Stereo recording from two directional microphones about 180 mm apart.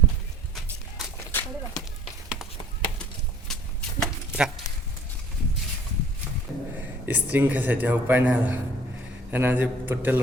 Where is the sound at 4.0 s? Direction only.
5° right (ahead or behind).